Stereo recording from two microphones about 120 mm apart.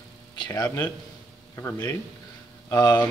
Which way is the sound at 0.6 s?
15° left (ahead or behind).